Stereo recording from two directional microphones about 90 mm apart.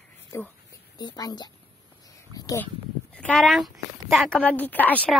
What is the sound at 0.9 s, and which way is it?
Speech, 50° left (ahead or behind).